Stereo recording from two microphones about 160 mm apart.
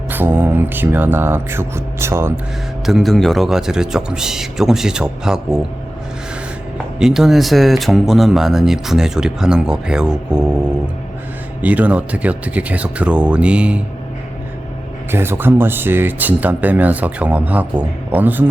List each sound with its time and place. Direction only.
0.1 s speech: 10° right (ahead or behind)
2.8 s speech: centre (ahead or behind)
7.0 s speech: 5° right (ahead or behind)
11.6 s speech: 10° right (ahead or behind)
15.1 s speech: 15° right (ahead or behind)